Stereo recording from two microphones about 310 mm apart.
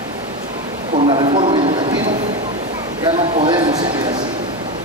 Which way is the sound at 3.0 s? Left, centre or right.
Centre.